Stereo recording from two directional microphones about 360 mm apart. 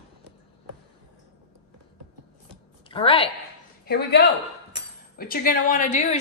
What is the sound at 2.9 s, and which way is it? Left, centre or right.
Speech, centre.